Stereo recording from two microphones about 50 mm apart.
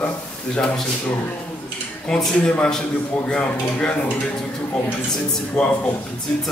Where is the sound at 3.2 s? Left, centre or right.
Left.